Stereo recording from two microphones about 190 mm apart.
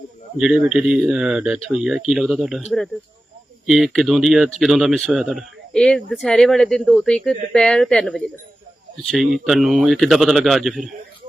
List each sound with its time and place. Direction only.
0.3 s speech: 5° right (ahead or behind)